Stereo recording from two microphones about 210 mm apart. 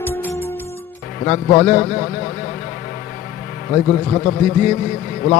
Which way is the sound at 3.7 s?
30° left (ahead or behind).